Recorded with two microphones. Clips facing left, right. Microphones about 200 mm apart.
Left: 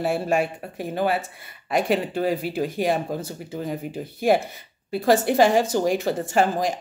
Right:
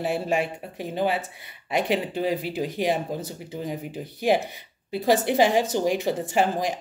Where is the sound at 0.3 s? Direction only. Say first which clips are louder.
Left 2 dB; 45° left (ahead or behind).